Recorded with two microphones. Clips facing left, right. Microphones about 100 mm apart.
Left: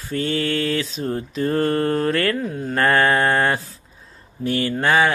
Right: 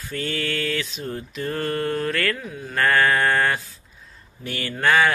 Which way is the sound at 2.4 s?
45° left (ahead or behind).